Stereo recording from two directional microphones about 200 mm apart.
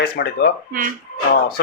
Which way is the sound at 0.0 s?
50° left (ahead or behind).